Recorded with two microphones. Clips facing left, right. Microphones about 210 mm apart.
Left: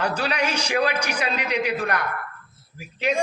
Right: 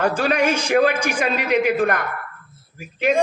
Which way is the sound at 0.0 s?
50° right (ahead or behind).